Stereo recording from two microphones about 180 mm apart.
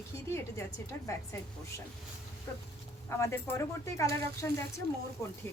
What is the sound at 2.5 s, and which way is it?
Speech, 15° left (ahead or behind).